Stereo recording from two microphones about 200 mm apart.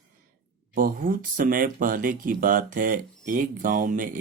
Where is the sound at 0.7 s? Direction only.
45° right (ahead or behind).